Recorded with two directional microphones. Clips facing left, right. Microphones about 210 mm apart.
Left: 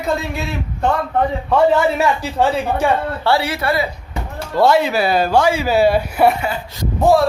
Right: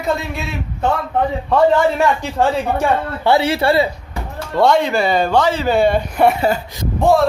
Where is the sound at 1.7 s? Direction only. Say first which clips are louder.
Right 1 dB; 5° left (ahead or behind).